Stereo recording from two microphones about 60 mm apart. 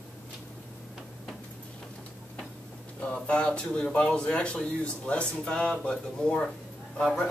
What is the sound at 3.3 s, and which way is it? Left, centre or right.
A man's voice, centre.